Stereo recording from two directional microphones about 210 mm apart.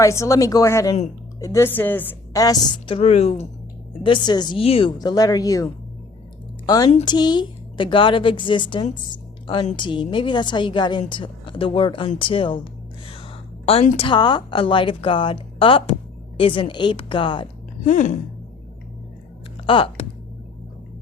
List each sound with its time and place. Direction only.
0.0 s a woman's voice: 15° left (ahead or behind)
13.7 s a woman's voice: 25° left (ahead or behind)
17.8 s speech: 35° left (ahead or behind)
19.6 s speech: 25° left (ahead or behind)